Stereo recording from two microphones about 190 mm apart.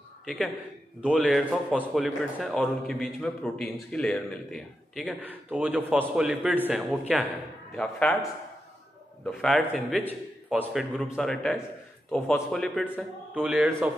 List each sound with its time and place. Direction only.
0.2 s a man's voice: centre (ahead or behind)
5.2 s a man's voice: 10° right (ahead or behind)
9.2 s a man's voice: 5° left (ahead or behind)
9.9 s a man's voice: 10° right (ahead or behind)
13.3 s a man's voice: 5° right (ahead or behind)